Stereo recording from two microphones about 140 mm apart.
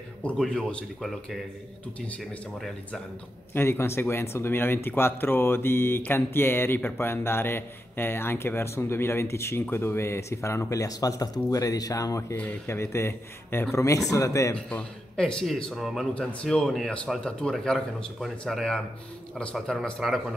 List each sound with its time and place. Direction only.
0.2 s speech: 10° left (ahead or behind); by 14.5 s 25° left (ahead or behind)
14.5 s a man's voice: 5° left (ahead or behind)